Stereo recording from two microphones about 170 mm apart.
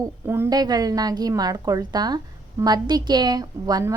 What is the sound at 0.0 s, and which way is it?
A woman's voice, 15° right (ahead or behind).